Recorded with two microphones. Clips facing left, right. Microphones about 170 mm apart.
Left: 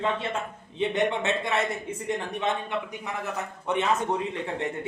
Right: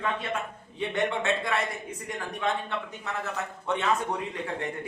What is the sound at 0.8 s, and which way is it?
A man's voice, 20° left (ahead or behind).